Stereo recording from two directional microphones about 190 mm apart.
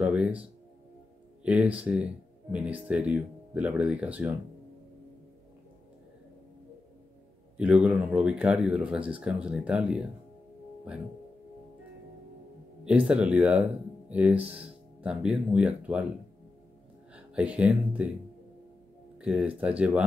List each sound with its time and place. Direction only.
0.0 s music: 5° right (ahead or behind)
1.4 s speech: 5° right (ahead or behind)
7.5 s speech: 5° right (ahead or behind)
12.8 s speech: 5° right (ahead or behind)
17.1 s speech: 5° right (ahead or behind)
19.2 s speech: 5° right (ahead or behind)